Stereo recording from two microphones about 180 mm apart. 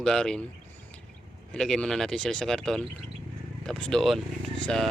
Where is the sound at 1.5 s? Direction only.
5° left (ahead or behind).